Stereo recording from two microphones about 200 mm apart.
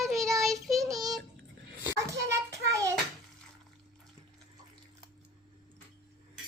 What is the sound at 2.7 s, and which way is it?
Child singing, 15° right (ahead or behind).